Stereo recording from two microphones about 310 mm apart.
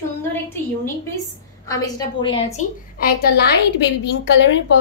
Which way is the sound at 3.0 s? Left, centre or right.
Left.